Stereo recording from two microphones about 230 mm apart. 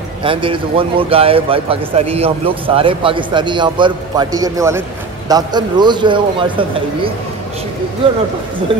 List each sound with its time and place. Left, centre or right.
0.2 s speech: right